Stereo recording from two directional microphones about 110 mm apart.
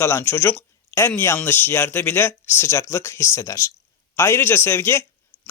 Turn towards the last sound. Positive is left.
turn(degrees=25)  # may be behind; listen again after turning